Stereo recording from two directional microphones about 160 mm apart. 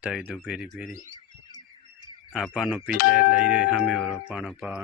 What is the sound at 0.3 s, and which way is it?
Speech, centre (ahead or behind).